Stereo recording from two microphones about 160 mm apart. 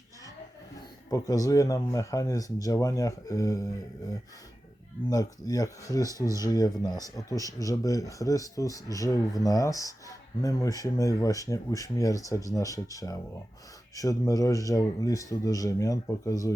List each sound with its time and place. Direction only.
1.1 s speech: 20° left (ahead or behind)
5.0 s speech: 20° left (ahead or behind)